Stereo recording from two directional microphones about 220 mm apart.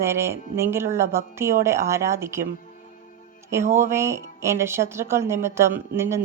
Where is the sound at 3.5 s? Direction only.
10° right (ahead or behind).